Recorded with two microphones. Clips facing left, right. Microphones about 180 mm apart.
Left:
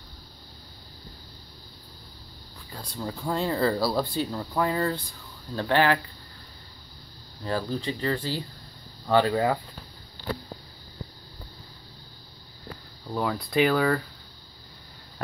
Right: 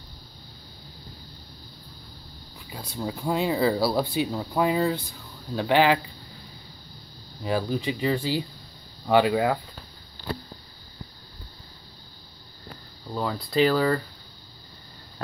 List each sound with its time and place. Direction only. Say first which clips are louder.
2.7 s speech: right 2 dB; 5° right (ahead or behind)
7.4 s speech: right 3 dB; 10° right (ahead or behind)
13.1 s speech: even; 5° left (ahead or behind)